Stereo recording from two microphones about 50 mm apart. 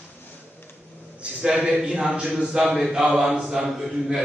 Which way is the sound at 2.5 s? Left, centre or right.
Centre.